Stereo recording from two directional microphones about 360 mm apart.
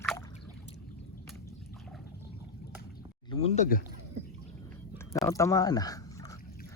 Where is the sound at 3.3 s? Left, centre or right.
Centre.